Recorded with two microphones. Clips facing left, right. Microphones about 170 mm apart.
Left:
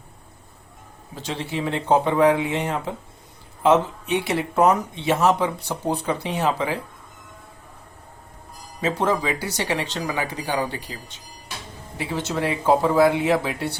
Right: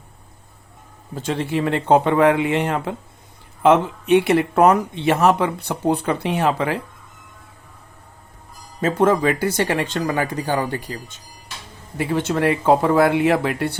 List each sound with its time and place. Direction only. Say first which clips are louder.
1.1 s speech: right 6 dB; 50° right (ahead or behind)
8.8 s speech: right 5 dB; 50° right (ahead or behind)